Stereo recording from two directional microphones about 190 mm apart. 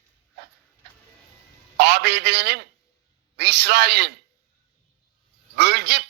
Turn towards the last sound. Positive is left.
turn(degrees=-60)  # may be behind; listen again after turning